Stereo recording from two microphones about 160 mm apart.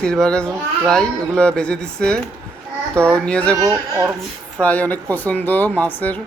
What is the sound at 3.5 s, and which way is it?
Speech, 20° right (ahead or behind).